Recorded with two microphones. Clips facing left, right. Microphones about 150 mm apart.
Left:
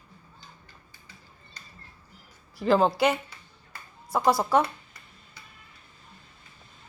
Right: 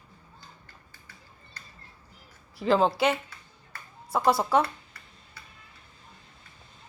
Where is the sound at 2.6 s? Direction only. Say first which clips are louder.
Left 1 dB; centre (ahead or behind).